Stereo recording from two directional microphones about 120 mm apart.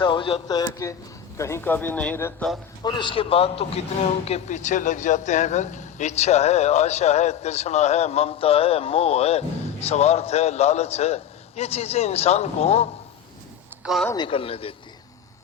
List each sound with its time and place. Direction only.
0.0 s a man's voice: 45° left (ahead or behind)
0.4 s speech: 35° left (ahead or behind); by 2.6 s 10° left (ahead or behind)
2.8 s a man's voice: 40° left (ahead or behind)
4.3 s a man's voice: 80° left; by 12.9 s 60° left (ahead or behind)
13.8 s speech: centre (ahead or behind)
14.2 s a man's voice: 50° left (ahead or behind)